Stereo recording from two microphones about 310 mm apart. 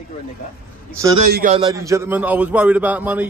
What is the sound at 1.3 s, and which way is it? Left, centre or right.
Speech, right.